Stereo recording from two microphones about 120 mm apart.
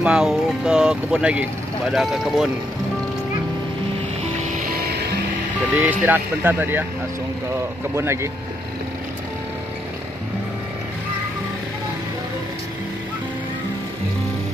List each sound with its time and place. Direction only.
0.0 s speech: 5° right (ahead or behind)
5.8 s speech: 15° right (ahead or behind)
7.9 s speech: 20° right (ahead or behind)